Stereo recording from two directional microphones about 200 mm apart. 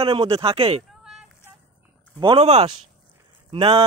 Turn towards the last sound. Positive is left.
turn(degrees=-30)  # may be behind; listen again after turning